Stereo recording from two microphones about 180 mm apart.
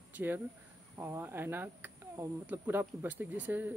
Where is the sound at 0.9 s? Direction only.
15° right (ahead or behind).